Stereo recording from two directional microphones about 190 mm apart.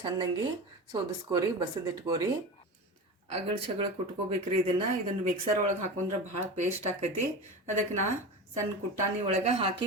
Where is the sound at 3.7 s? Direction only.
30° right (ahead or behind).